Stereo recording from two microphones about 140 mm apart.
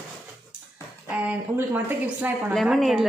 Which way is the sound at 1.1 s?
10° right (ahead or behind).